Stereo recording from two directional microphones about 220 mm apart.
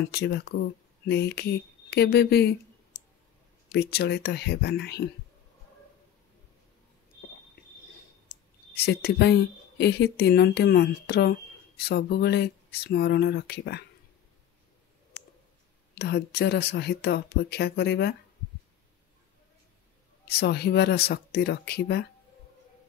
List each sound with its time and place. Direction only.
0.1 s speech: 45° left (ahead or behind)
3.7 s speech: 45° left (ahead or behind)
8.7 s speech: 45° left (ahead or behind)
15.9 s speech: 50° left (ahead or behind)
20.2 s speech: 45° left (ahead or behind)